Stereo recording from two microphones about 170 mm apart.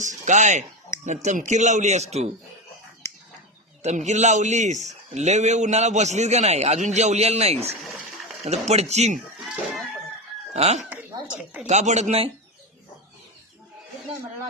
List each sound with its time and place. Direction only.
0.0 s a man's voice: 45° right (ahead or behind)
3.8 s a man's voice: 45° right (ahead or behind)
10.5 s a man's voice: 40° right (ahead or behind)